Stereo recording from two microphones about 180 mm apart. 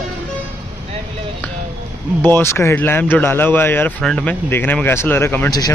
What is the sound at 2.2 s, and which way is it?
Speech, 10° left (ahead or behind).